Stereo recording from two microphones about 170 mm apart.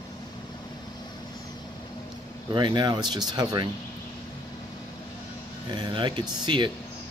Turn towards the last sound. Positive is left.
turn(degrees=-25)  # may be behind; listen again after turning